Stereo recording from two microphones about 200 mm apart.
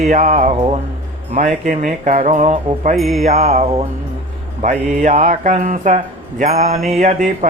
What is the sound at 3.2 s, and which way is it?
Mantra, 35° right (ahead or behind).